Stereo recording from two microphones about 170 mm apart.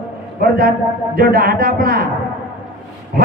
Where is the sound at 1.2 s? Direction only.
60° right (ahead or behind).